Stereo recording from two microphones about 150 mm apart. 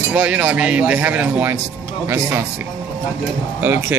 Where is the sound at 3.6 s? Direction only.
15° right (ahead or behind).